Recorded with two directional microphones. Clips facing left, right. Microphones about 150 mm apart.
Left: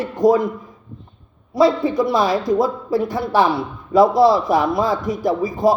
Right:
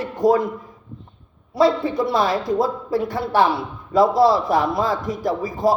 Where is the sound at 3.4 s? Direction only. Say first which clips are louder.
Even; centre (ahead or behind).